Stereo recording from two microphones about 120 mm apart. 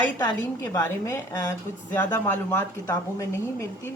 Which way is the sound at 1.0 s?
25° left (ahead or behind).